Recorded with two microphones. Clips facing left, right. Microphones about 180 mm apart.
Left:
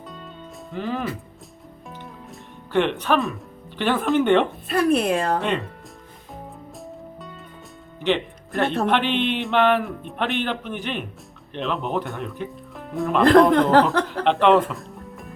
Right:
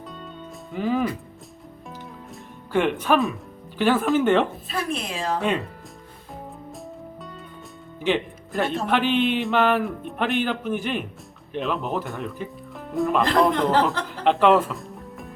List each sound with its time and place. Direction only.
0.7 s speech: 5° right (ahead or behind)
2.7 s speech: 5° right (ahead or behind)
4.7 s speech: 60° left (ahead or behind)
5.4 s speech: centre (ahead or behind)
8.0 s music: 10° right (ahead or behind)
8.6 s speech: 65° left (ahead or behind)
8.9 s speech: 5° right (ahead or behind)